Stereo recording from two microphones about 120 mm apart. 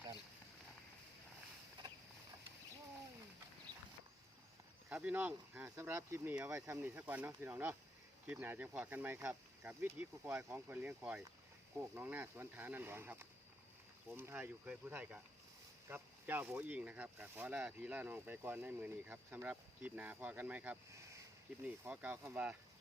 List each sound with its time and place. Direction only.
4.9 s speech: 15° right (ahead or behind)
20.9 s a sound: 25° right (ahead or behind)
21.8 s speech: 15° right (ahead or behind)